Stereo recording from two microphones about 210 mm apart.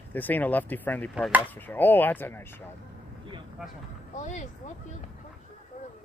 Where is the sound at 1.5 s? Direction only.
10° left (ahead or behind).